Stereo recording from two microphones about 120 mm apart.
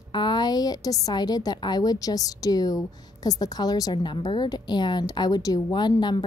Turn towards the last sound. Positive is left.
turn(degrees=35)  # may be behind; listen again after turning